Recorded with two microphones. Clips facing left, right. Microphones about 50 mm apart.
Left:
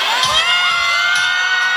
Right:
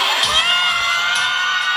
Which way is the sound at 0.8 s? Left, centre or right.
Left.